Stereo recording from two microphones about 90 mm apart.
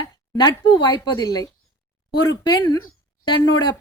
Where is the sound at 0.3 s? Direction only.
50° left (ahead or behind).